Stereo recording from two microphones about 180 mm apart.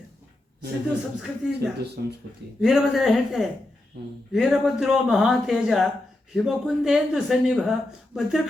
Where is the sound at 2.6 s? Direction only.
Centre (ahead or behind).